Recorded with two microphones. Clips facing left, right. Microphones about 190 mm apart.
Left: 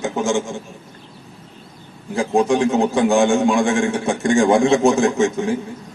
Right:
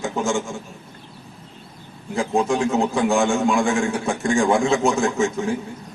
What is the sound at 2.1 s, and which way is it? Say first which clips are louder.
A man's voice: left 4 dB; 30° left (ahead or behind).